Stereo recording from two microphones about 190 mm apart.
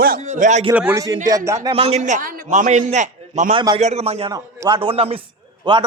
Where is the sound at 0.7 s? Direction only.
10° right (ahead or behind).